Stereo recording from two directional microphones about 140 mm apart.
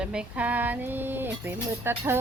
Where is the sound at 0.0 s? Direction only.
5° right (ahead or behind).